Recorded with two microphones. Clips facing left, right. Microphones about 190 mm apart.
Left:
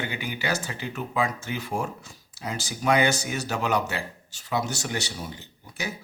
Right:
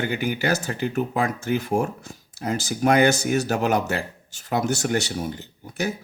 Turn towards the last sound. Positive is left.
turn(degrees=-50)  # may be behind; listen again after turning